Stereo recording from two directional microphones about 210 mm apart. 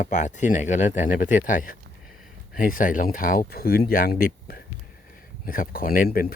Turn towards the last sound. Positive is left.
turn(degrees=45)  # may be behind; listen again after turning